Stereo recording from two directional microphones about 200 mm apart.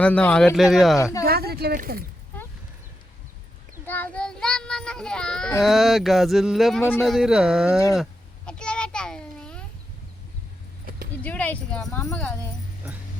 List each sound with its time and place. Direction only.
0.0 s speech: 5° left (ahead or behind)
1.2 s speech: 50° right (ahead or behind)
3.8 s child singing: 10° left (ahead or behind)
5.6 s speech: centre (ahead or behind)
8.4 s a sound: 5° left (ahead or behind)
11.2 s speech: 5° left (ahead or behind)